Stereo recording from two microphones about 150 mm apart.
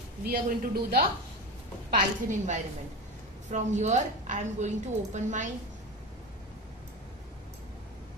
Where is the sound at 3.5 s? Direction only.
50° right (ahead or behind).